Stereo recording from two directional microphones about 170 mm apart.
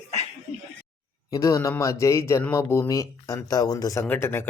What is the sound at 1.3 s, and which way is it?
A man's voice, 20° left (ahead or behind).